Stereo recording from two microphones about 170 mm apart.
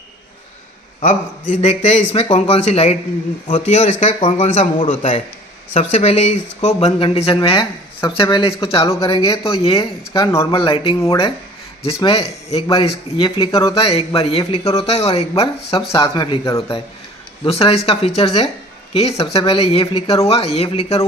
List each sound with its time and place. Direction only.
1.0 s a man's voice: 50° left (ahead or behind)
10.1 s speech: 15° left (ahead or behind)
10.5 s speech: 30° left (ahead or behind)